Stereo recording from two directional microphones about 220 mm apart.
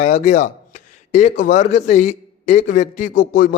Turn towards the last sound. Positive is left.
turn(degrees=40)  # may be behind; listen again after turning